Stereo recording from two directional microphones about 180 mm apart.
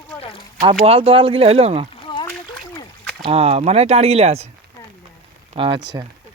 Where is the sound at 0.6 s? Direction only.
25° right (ahead or behind).